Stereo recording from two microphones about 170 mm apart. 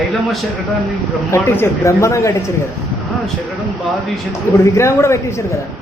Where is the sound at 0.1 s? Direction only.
Centre (ahead or behind).